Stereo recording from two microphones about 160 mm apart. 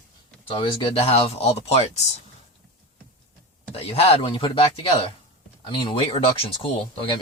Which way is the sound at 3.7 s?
40° left (ahead or behind).